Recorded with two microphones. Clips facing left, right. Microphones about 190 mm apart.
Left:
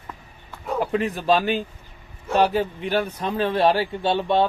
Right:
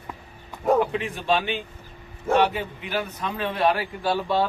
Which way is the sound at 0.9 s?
40° left (ahead or behind).